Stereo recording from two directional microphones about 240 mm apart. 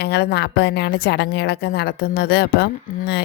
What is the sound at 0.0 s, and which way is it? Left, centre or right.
Speech, left.